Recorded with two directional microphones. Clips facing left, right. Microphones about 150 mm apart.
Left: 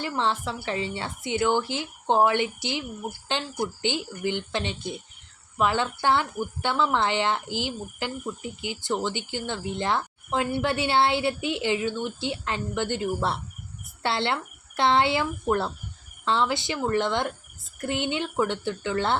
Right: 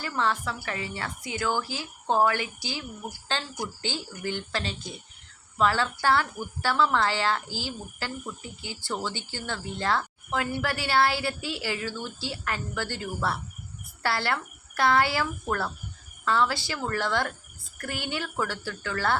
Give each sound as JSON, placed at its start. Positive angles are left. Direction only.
{"t": 0.0, "sound": "a woman's voice", "side_deg": 25}